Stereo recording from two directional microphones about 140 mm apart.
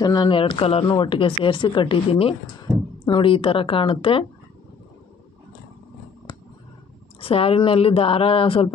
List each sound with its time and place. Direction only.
0.0 s speech: 30° left (ahead or behind)
7.2 s speech: 45° left (ahead or behind)